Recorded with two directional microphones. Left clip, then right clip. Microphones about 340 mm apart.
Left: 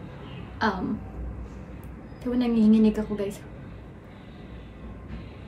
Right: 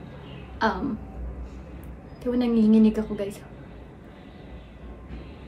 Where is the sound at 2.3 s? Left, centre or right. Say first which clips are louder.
Right 1 dB; centre.